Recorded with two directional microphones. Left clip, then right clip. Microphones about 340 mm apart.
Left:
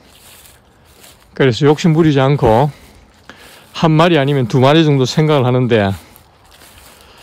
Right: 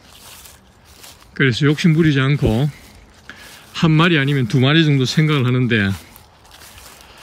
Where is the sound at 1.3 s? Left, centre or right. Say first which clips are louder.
Left 5 dB; centre.